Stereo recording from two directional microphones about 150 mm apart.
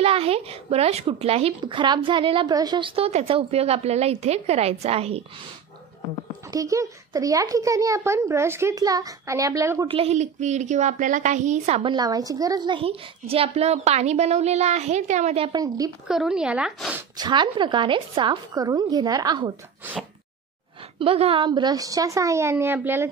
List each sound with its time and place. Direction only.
0.0 s speech: 40° right (ahead or behind)
3.1 s a woman's voice: 40° right (ahead or behind)
6.5 s speech: 20° right (ahead or behind)
9.8 s a woman's voice: 40° right (ahead or behind)
11.8 s a woman's voice: 30° right (ahead or behind); by 15.5 s 45° right (ahead or behind)
15.5 s speech: 25° right (ahead or behind)
16.1 s speech: 5° right (ahead or behind)
17.2 s speech: 30° right (ahead or behind)
21.0 s speech: 40° right (ahead or behind); by 23.0 s 15° right (ahead or behind)